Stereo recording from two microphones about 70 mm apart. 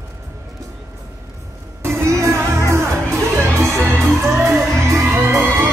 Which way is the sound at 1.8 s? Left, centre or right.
Right.